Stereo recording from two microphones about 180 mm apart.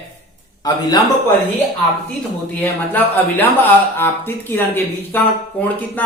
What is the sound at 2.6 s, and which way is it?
Speech, 10° left (ahead or behind).